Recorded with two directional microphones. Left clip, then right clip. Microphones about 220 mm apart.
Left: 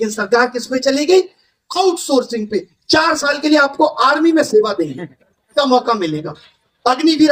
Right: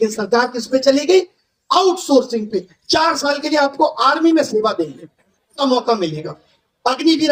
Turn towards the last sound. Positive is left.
turn(degrees=25)  # may be behind; listen again after turning